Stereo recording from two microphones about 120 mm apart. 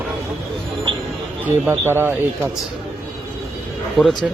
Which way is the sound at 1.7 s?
20° right (ahead or behind).